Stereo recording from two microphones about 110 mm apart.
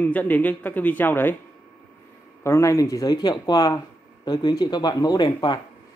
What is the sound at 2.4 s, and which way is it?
Speech, 25° left (ahead or behind).